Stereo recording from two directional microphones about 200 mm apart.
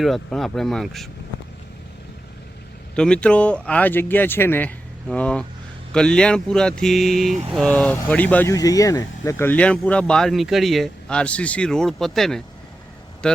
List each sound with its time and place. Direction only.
0.0 s speech: centre (ahead or behind)
2.9 s a man's voice: 5° left (ahead or behind)